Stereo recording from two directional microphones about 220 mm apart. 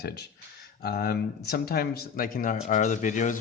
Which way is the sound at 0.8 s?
45° left (ahead or behind).